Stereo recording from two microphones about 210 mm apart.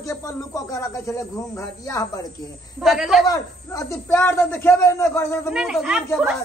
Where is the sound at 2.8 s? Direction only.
Centre (ahead or behind).